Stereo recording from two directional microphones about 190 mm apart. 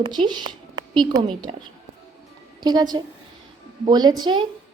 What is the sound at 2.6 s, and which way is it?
A woman's voice, 20° right (ahead or behind).